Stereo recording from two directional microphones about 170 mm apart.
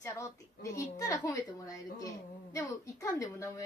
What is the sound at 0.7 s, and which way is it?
A woman's voice, 20° left (ahead or behind).